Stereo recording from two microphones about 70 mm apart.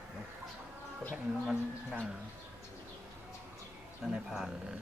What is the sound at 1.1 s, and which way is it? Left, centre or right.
Speech, centre.